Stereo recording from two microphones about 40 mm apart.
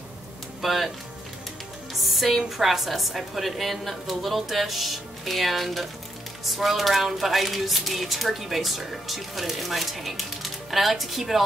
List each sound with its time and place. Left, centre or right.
0.6 s speech: centre
2.0 s speech: centre